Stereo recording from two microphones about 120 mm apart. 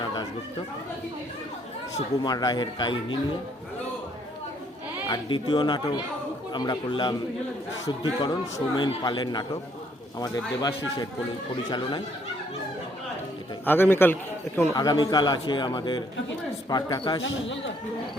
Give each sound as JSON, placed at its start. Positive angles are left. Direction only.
{"t": 2.2, "sound": "a man's voice", "side_deg": 35}
{"t": 5.0, "sound": "a man's voice", "side_deg": 40}
{"t": 13.7, "sound": "a man's voice", "side_deg": 15}
{"t": 14.8, "sound": "a man's voice", "side_deg": 35}